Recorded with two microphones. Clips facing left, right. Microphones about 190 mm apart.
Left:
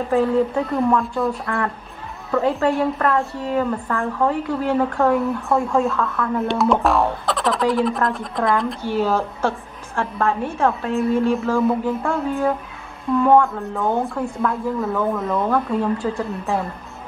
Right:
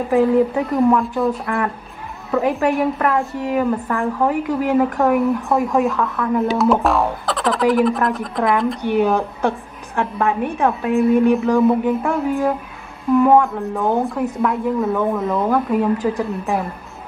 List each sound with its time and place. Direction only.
0.1 s a woman's voice: 15° right (ahead or behind)
6.4 s speech: centre (ahead or behind)
9.0 s a woman's voice: 15° right (ahead or behind)